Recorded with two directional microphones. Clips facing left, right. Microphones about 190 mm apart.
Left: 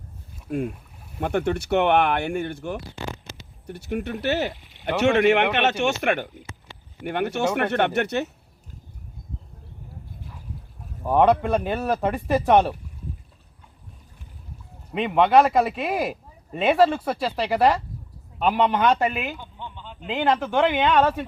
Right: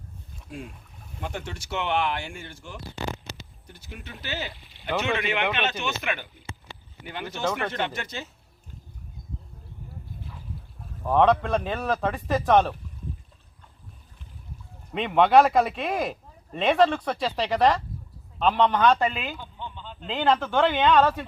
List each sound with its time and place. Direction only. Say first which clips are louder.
0.5 s speech: left 12 dB; 60° left (ahead or behind)
11.0 s a man's voice: left 2 dB; 10° left (ahead or behind)
14.9 s a man's voice: left 1 dB; centre (ahead or behind)